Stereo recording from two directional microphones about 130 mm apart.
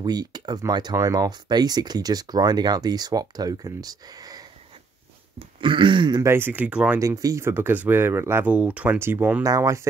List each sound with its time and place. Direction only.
0.0 s speech: 30° right (ahead or behind)
5.6 s speech: 40° right (ahead or behind)
6.2 s speech: 15° right (ahead or behind)
7.0 s speech: 25° right (ahead or behind)